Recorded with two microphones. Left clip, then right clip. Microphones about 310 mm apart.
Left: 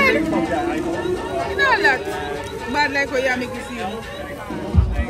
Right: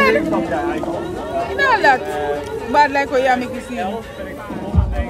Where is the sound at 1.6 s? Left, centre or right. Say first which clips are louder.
Right 3 dB; right.